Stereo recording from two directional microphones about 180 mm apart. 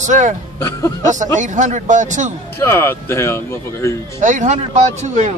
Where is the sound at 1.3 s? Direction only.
45° right (ahead or behind).